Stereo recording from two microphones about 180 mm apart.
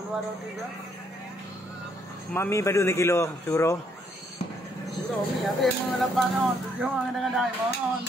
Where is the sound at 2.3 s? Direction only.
15° left (ahead or behind).